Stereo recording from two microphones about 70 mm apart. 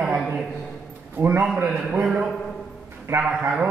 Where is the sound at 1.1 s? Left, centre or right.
Right.